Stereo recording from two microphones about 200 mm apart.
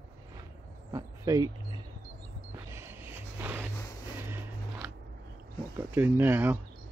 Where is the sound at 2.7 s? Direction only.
10° right (ahead or behind).